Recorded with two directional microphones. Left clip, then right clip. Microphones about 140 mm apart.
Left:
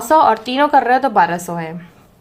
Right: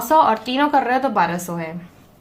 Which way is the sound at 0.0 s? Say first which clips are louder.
Left 3 dB; 35° left (ahead or behind).